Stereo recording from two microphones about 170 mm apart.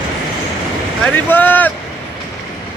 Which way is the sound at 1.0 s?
10° left (ahead or behind).